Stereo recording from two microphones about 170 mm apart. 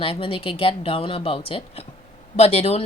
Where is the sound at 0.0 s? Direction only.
30° left (ahead or behind).